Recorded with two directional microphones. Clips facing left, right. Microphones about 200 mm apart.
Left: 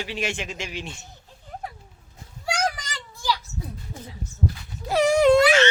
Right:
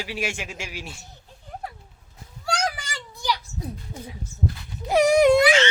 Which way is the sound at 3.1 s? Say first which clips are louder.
Even; 20° right (ahead or behind).